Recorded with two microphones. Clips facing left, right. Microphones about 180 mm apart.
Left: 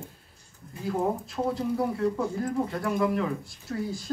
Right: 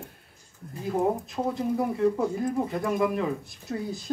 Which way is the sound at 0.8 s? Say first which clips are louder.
Right 2 dB; 20° right (ahead or behind).